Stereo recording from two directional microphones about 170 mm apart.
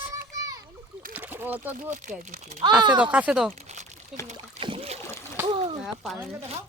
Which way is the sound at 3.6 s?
40° right (ahead or behind).